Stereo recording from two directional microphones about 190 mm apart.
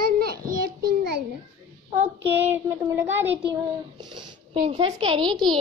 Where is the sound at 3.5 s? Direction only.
25° right (ahead or behind).